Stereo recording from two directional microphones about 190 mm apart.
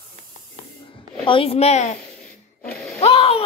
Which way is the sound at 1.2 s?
30° left (ahead or behind).